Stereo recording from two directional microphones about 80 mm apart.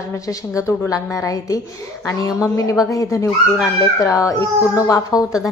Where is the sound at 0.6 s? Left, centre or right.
Left.